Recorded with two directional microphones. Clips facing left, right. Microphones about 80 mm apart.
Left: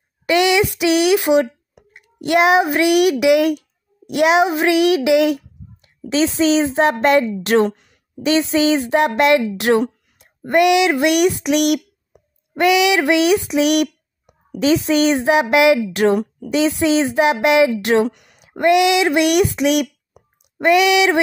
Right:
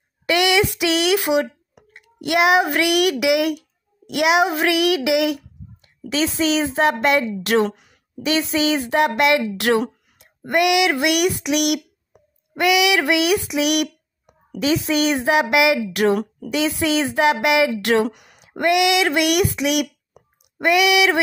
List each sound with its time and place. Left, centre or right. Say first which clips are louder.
0.3 s a child's voice: left 3 dB; left
7.7 s a woman's voice: right 1 dB; centre
8.2 s speech: left 4 dB; left
12.5 s a sound: left 3 dB; left
14.6 s speech: left 4 dB; left
18.0 s speech: left 3 dB; centre
18.6 s speech: left 3 dB; left